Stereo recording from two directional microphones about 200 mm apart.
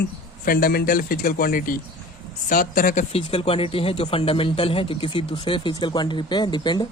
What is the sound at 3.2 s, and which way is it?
Speech, 30° left (ahead or behind).